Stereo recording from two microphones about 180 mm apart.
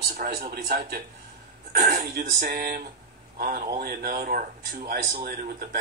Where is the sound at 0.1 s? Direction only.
50° right (ahead or behind).